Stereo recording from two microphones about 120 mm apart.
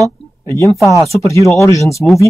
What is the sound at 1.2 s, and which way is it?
Speech, 25° left (ahead or behind).